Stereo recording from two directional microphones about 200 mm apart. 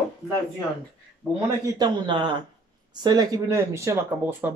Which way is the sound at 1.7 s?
25° right (ahead or behind).